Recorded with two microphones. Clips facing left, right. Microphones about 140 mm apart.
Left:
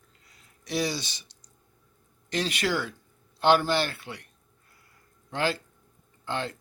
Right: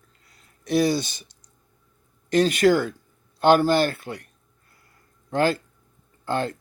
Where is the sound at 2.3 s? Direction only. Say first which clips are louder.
Right 10 dB; 45° right (ahead or behind).